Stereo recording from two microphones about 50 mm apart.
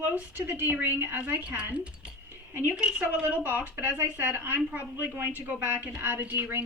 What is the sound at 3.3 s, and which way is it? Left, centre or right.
Speech, right.